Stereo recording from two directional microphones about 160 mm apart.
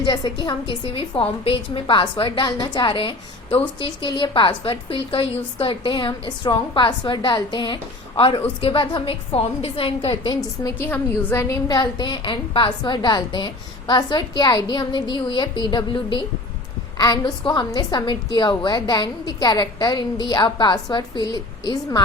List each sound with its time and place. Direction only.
0.0 s a woman's voice: 25° left (ahead or behind)
10.6 s a woman's voice: 15° left (ahead or behind)